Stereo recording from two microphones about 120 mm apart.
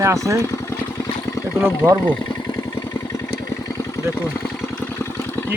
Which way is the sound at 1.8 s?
15° right (ahead or behind).